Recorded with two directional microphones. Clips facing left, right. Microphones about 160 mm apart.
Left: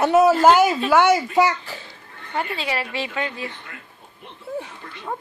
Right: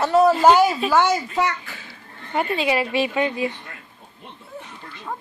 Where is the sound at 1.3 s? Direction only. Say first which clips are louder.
Left 4 dB; 30° left (ahead or behind).